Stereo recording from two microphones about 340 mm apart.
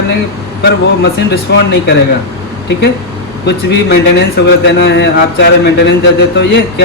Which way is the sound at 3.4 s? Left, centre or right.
Left.